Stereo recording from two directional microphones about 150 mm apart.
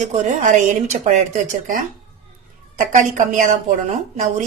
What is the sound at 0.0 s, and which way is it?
A woman's voice, 55° right (ahead or behind).